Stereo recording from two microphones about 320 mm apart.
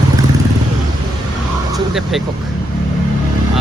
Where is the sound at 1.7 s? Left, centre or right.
Centre.